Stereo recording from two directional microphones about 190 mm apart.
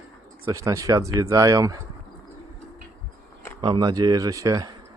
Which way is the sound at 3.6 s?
25° right (ahead or behind).